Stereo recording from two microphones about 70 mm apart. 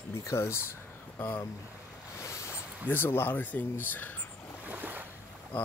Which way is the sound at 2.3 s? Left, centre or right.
Left.